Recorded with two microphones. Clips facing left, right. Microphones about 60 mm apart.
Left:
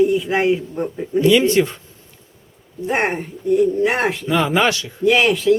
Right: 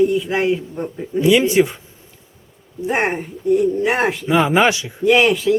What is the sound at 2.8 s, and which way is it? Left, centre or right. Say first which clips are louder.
Speech: even; centre.